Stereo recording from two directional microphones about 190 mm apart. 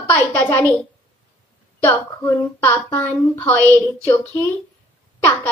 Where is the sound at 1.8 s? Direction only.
10° left (ahead or behind).